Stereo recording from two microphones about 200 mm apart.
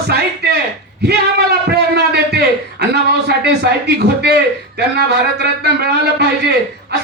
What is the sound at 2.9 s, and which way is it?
A man's voice, 55° right (ahead or behind).